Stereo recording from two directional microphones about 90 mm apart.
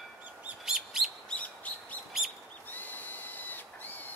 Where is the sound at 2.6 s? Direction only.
20° left (ahead or behind).